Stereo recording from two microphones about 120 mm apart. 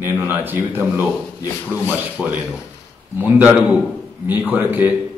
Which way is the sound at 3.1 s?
15° right (ahead or behind).